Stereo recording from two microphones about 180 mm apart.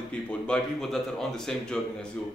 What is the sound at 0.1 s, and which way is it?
Speech, 5° left (ahead or behind).